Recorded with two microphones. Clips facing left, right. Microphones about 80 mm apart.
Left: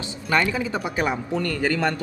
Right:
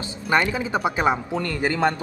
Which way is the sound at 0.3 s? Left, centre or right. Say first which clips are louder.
Right 1 dB; right.